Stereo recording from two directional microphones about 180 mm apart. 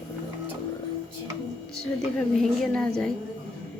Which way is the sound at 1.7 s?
Centre (ahead or behind).